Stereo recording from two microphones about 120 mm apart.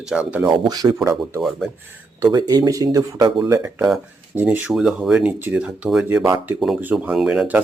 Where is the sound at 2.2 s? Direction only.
30° right (ahead or behind).